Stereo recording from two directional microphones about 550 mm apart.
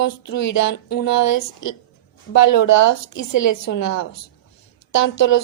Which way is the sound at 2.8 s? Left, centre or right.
Left.